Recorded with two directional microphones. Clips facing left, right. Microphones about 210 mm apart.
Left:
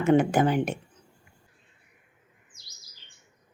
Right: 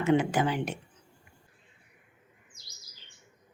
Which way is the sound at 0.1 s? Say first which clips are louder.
Left 5 dB; 55° left (ahead or behind).